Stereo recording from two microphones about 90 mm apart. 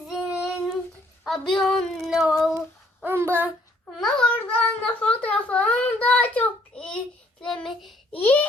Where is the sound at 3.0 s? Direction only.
25° right (ahead or behind).